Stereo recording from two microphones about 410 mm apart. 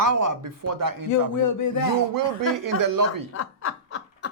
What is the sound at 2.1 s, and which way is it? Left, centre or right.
Speech, right.